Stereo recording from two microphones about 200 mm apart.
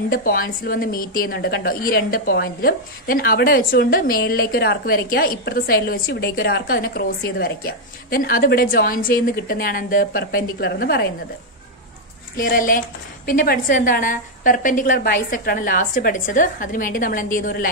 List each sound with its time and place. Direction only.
0.1 s a woman's voice: 45° left (ahead or behind)
12.4 s a woman's voice: 45° left (ahead or behind)